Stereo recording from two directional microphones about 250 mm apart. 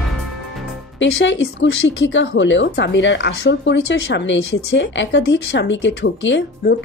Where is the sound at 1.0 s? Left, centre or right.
Left.